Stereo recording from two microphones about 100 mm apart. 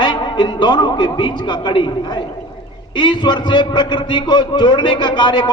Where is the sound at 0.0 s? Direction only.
50° left (ahead or behind).